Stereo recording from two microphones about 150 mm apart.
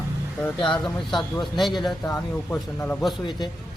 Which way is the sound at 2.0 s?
15° left (ahead or behind).